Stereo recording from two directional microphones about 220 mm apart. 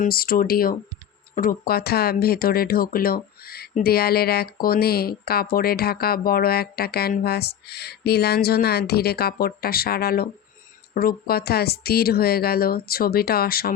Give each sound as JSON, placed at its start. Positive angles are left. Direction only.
{"t": 0.0, "sound": "speech", "side_deg": 45}